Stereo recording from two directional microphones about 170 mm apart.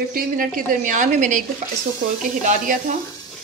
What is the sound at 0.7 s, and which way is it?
Speech, 45° right (ahead or behind).